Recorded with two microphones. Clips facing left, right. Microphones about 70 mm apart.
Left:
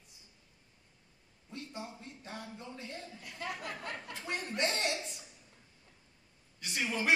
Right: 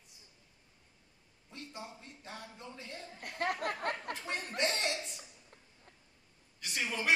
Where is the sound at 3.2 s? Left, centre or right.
Right.